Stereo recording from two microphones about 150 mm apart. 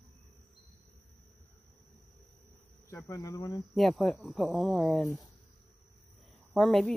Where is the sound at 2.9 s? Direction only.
20° left (ahead or behind).